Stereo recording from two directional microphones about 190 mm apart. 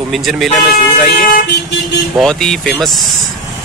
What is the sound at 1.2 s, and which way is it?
Speech, 50° left (ahead or behind).